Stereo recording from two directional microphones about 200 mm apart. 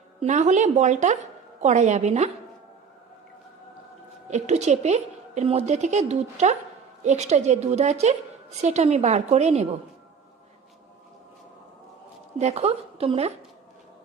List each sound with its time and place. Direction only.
0.2 s a woman's voice: 35° right (ahead or behind)
4.3 s a woman's voice: 35° right (ahead or behind)
12.4 s a woman's voice: 30° right (ahead or behind)